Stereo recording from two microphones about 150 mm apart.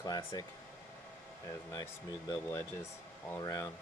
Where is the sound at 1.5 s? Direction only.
25° left (ahead or behind).